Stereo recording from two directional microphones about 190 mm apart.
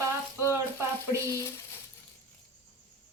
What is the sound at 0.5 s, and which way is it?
Frying, 15° right (ahead or behind).